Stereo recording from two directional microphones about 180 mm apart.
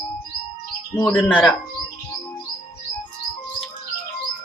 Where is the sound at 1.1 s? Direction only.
Centre (ahead or behind).